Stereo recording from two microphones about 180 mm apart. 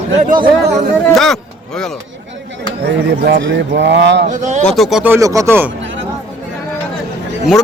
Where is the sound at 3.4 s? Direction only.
85° right.